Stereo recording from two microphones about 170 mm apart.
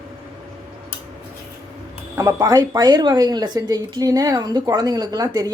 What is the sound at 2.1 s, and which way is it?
Speech, 20° right (ahead or behind).